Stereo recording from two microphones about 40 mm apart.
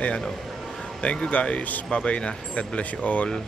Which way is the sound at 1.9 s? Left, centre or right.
Left.